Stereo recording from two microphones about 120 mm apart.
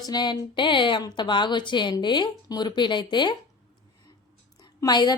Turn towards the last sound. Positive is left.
turn(degrees=35)  # may be behind; listen again after turning